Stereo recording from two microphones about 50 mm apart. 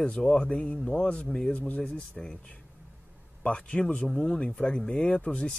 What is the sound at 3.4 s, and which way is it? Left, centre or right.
Speech, left.